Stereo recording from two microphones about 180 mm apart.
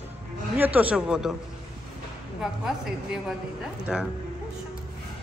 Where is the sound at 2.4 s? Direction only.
5° right (ahead or behind).